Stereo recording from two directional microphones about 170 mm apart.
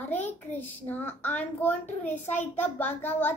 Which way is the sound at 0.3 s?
10° left (ahead or behind).